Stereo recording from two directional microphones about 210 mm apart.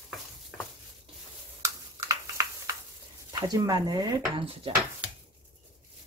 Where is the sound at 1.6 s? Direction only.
15° right (ahead or behind).